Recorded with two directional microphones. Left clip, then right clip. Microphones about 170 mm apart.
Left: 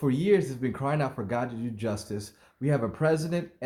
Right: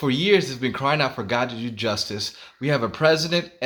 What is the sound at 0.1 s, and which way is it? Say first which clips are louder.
Speech: right 5 dB; 15° right (ahead or behind).